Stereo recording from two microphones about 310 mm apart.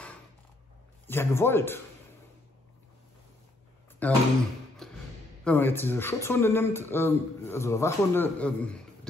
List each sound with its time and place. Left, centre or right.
1.0 s speech: centre
4.0 s speech: centre
4.8 s a sound: centre
5.4 s speech: centre